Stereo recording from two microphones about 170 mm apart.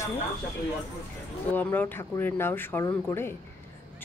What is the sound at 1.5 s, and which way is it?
Speech, 10° left (ahead or behind).